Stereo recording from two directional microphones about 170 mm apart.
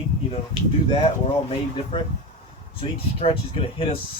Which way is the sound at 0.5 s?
35° left (ahead or behind).